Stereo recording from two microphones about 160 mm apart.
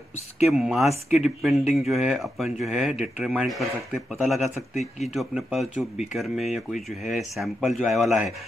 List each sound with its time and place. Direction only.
0.5 s speech: centre (ahead or behind)
4.7 s speech: 45° left (ahead or behind)
5.1 s speech: centre (ahead or behind)